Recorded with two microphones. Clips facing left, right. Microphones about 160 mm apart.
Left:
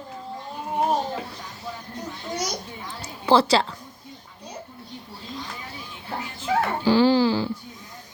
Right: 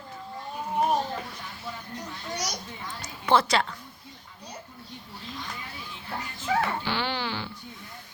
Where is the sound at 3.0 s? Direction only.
30° left (ahead or behind).